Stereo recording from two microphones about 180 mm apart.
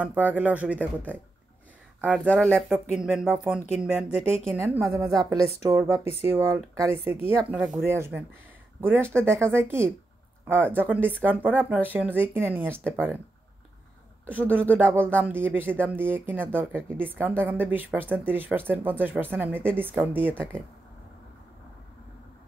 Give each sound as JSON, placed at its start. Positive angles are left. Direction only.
{"t": 0.0, "sound": "speech", "side_deg": -10}
{"t": 2.2, "sound": "speech", "side_deg": 5}
{"t": 2.5, "sound": "speech", "side_deg": -5}
{"t": 4.6, "sound": "speech", "side_deg": -15}
{"t": 14.3, "sound": "speech", "side_deg": -10}